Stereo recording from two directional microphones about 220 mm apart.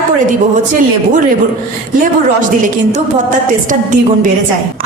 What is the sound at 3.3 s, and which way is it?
A woman's voice, 35° right (ahead or behind).